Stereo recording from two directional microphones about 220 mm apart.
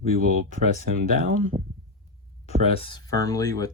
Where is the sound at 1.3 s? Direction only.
35° right (ahead or behind).